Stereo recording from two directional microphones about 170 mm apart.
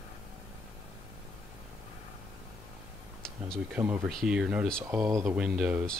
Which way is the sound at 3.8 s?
10° right (ahead or behind).